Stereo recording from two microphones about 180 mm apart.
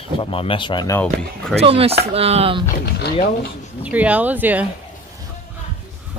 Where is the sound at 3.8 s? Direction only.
10° right (ahead or behind).